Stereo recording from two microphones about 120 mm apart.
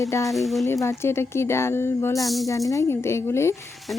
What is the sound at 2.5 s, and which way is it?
Speech, 25° left (ahead or behind).